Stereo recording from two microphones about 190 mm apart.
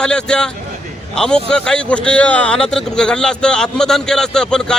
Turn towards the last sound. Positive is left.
turn(degrees=5)  # may be behind; listen again after turning